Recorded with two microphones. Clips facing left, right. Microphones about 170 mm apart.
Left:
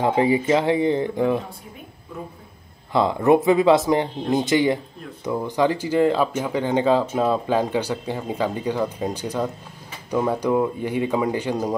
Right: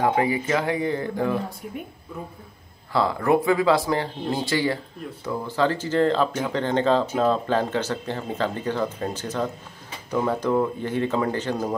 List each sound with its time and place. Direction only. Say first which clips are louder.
0.0 s speech: left 3 dB; 25° left (ahead or behind)
2.9 s speech: left 4 dB; 20° left (ahead or behind)